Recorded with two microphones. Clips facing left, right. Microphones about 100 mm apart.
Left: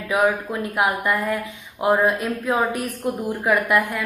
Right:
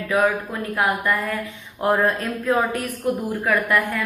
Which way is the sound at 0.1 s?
20° left (ahead or behind).